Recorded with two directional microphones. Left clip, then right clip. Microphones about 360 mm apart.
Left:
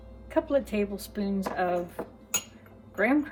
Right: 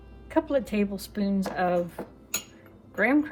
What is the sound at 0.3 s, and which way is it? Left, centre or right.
Speech, right.